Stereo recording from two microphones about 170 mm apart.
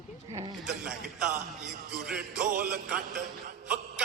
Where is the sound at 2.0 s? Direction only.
5° right (ahead or behind).